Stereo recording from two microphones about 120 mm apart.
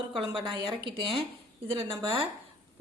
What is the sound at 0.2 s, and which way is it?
A woman's voice, 50° right (ahead or behind).